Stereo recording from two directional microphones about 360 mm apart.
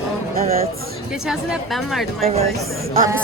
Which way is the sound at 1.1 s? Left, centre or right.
Centre.